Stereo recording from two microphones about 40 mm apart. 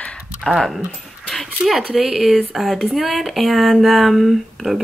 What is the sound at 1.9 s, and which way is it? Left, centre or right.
Speech, centre.